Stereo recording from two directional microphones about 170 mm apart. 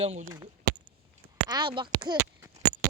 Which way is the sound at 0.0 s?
40° right (ahead or behind).